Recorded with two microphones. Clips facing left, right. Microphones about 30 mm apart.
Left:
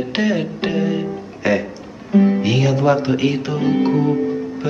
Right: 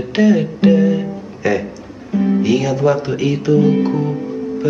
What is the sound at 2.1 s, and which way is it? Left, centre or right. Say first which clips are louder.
Music: even; left.